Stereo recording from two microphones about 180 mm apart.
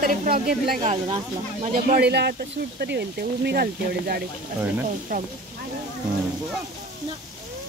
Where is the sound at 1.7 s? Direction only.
55° right (ahead or behind).